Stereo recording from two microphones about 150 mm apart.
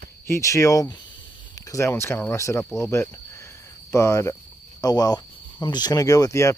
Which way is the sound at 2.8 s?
20° left (ahead or behind).